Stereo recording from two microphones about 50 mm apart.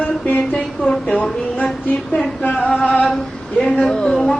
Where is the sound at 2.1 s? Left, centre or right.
Left.